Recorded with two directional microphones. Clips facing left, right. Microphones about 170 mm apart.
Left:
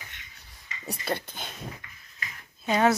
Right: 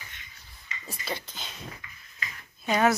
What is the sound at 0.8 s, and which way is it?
Speech, 55° left (ahead or behind).